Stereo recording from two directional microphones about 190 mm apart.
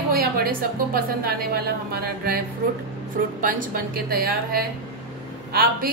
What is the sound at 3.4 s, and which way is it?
A woman's voice, 45° right (ahead or behind).